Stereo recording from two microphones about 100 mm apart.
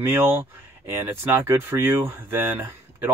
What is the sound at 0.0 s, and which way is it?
Speech, 25° right (ahead or behind).